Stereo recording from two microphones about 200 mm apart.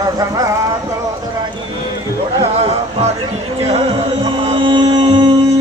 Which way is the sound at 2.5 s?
30° right (ahead or behind).